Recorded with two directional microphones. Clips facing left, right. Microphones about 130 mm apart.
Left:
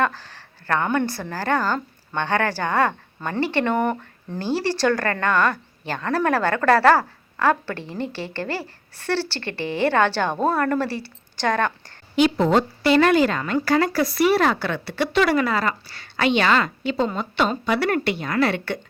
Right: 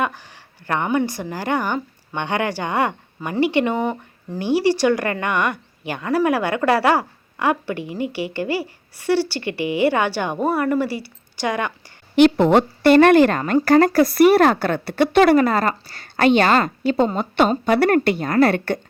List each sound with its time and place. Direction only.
0.0 s speech: 15° right (ahead or behind)
12.1 s a woman's voice: 65° right (ahead or behind); by 18.8 s 50° right (ahead or behind)